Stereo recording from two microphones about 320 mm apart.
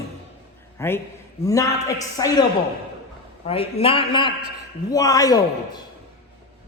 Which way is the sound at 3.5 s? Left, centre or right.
Centre.